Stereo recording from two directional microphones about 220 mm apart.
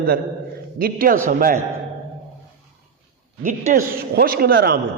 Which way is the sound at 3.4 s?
40° right (ahead or behind).